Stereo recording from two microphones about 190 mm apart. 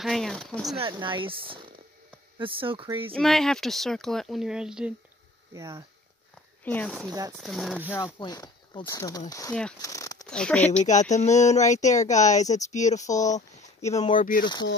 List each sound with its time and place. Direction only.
0.0 s speech: centre (ahead or behind)
0.7 s speech: 25° right (ahead or behind)
3.2 s speech: centre (ahead or behind)
5.5 s speech: 15° right (ahead or behind)
6.6 s speech: 10° left (ahead or behind)
7.1 s speech: 20° right (ahead or behind)
7.3 s speech: centre (ahead or behind)
8.0 s speech: 20° left (ahead or behind)
9.5 s speech: 5° left (ahead or behind)
9.8 s a sound: 15° left (ahead or behind)
10.2 s speech: 5° left (ahead or behind)
10.8 s speech: 40° left (ahead or behind)
14.4 s speech: 20° left (ahead or behind)